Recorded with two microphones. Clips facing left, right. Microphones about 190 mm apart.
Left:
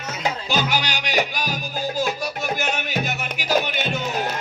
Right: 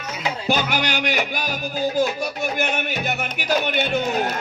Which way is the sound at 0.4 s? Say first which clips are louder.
Right 4 dB; 55° right (ahead or behind).